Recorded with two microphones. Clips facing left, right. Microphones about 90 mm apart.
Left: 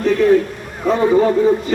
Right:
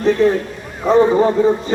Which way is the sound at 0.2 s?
30° right (ahead or behind).